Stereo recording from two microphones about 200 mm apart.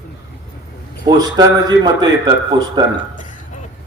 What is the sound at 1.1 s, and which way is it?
A man's voice, 20° right (ahead or behind).